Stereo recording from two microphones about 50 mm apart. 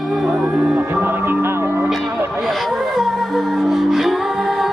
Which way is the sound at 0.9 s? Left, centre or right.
Right.